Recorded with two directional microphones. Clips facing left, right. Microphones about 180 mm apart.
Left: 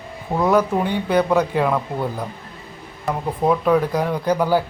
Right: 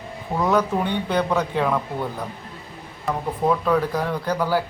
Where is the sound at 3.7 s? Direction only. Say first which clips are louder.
Left 3 dB; 15° left (ahead or behind).